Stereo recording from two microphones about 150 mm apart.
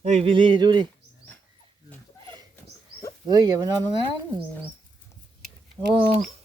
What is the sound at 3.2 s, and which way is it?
Speech, 30° right (ahead or behind).